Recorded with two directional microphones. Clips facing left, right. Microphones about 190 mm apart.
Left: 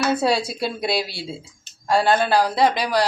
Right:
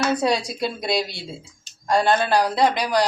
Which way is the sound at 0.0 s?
5° left (ahead or behind).